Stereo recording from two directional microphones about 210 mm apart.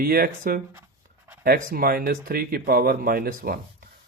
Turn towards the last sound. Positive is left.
turn(degrees=-45)  # may be behind; listen again after turning